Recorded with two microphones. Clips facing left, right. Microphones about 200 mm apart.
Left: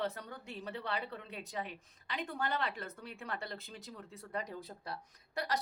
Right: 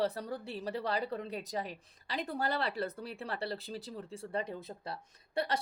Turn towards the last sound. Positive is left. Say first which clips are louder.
# right 3 dB
turn(degrees=-30)  # may be behind; listen again after turning